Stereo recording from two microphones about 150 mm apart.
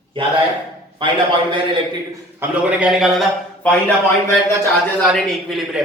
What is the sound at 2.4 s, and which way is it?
A man's voice, 10° right (ahead or behind).